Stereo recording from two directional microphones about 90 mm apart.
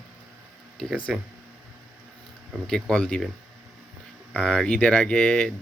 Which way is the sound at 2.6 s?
10° left (ahead or behind).